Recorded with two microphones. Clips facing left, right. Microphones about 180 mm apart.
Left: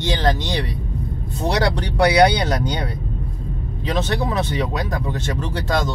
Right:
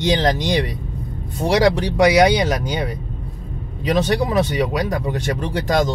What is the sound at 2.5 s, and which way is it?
Speech, 10° right (ahead or behind).